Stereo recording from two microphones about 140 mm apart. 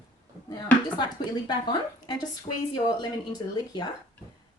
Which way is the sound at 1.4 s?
30° left (ahead or behind).